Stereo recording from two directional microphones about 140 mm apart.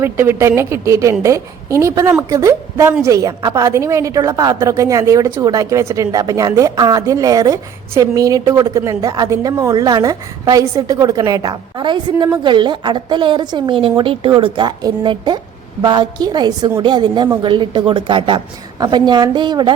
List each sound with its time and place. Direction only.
0.0 s a woman's voice: 15° right (ahead or behind); by 19.7 s 30° right (ahead or behind)